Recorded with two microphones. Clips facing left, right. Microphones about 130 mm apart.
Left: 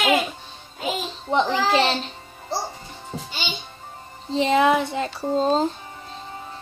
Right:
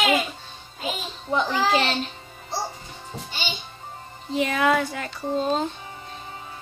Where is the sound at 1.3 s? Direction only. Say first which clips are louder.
Left 2 dB; 25° left (ahead or behind).